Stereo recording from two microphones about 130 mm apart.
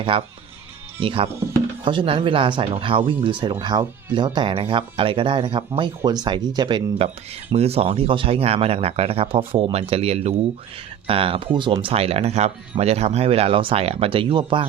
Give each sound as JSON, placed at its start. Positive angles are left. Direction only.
{"t": 0.1, "sound": "speech", "side_deg": -45}
{"t": 7.5, "sound": "speech", "side_deg": -50}